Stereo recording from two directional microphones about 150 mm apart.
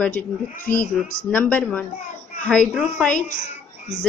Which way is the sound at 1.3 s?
10° left (ahead or behind).